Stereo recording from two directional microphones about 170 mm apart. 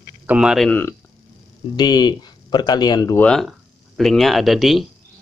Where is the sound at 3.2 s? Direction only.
5° left (ahead or behind).